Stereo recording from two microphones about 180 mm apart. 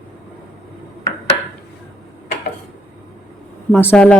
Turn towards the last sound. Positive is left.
turn(degrees=10)  # may be behind; listen again after turning